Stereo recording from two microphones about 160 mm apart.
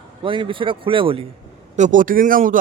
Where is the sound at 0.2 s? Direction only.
30° right (ahead or behind).